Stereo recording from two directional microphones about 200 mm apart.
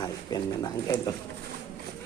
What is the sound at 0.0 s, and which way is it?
Speech, 20° left (ahead or behind).